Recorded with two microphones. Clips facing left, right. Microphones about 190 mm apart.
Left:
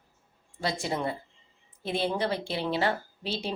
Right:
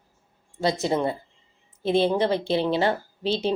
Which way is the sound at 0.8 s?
25° right (ahead or behind).